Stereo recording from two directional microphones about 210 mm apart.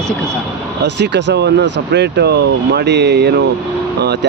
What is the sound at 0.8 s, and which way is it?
Speech, 55° right (ahead or behind).